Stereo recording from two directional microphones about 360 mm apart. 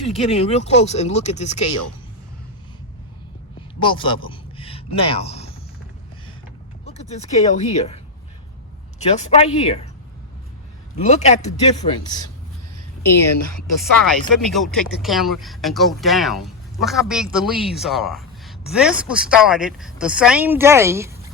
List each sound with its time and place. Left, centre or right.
0.0 s speech: centre
3.8 s speech: centre
6.8 s speech: centre
9.0 s speech: centre
10.9 s speech: centre
14.0 s a woman's voice: centre